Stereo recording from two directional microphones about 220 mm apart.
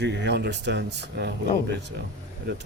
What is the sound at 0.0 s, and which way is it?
Speech, 50° right (ahead or behind).